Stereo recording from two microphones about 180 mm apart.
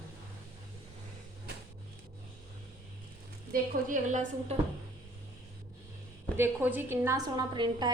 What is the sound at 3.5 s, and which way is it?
A woman's voice, 45° right (ahead or behind).